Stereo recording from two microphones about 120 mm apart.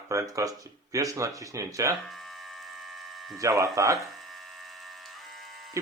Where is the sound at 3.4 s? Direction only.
25° right (ahead or behind).